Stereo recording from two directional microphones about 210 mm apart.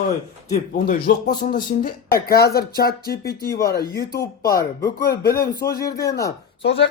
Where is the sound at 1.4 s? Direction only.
40° left (ahead or behind).